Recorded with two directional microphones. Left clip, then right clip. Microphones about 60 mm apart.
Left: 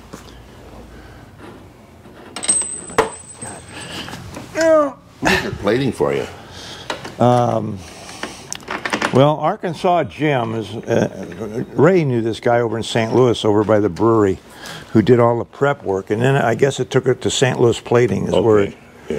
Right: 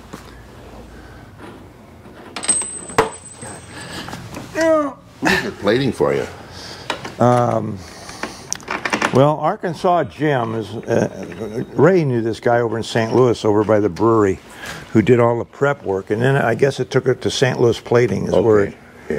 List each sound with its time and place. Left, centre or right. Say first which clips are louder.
2.3 s coin: left 1 dB; centre
3.0 s chopping: even; right
3.4 s a sound: left 1 dB; left
5.6 s speech: right 1 dB; left
7.2 s speech: even; left
8.3 s a sound: right 2 dB; left
8.6 s a sound: right 1 dB; centre
9.1 s speech: left 1 dB; left
14.6 s a sound: left 1 dB; left
15.0 s speech: left 1 dB; left
17.2 s speech: left 1 dB; left
17.9 s speech: even; left